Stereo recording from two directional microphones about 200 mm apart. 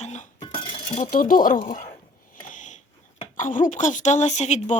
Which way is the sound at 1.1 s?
45° left (ahead or behind).